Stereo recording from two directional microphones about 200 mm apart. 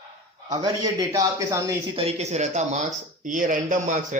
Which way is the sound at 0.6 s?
20° right (ahead or behind).